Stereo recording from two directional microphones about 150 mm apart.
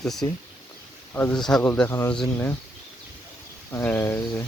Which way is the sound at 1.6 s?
15° left (ahead or behind).